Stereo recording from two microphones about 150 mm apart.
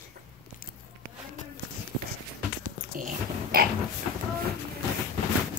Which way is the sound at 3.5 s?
80° right.